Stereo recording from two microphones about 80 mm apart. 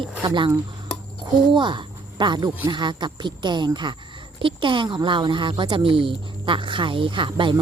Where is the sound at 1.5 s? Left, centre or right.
Right.